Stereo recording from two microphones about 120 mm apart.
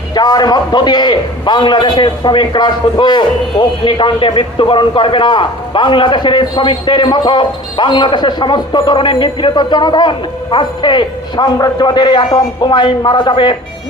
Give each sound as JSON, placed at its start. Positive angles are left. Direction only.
{"t": 0.1, "sound": "a man's voice", "side_deg": 35}